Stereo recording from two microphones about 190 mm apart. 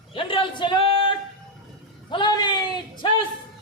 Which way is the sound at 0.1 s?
30° left (ahead or behind).